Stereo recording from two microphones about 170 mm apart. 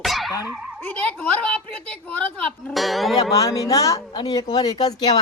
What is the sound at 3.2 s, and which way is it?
A man's voice, 20° left (ahead or behind).